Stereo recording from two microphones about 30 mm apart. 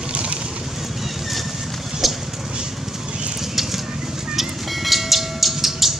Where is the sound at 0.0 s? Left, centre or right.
Right.